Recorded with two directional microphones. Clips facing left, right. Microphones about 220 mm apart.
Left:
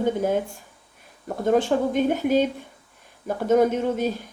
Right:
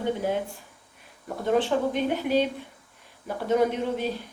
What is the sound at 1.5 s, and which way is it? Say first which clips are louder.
A woman's voice: left 3 dB; 45° left (ahead or behind).